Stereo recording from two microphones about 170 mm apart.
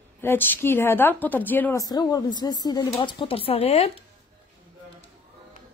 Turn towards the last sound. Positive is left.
turn(degrees=35)  # may be behind; listen again after turning